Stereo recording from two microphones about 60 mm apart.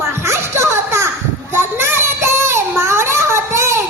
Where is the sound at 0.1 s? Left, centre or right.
Right.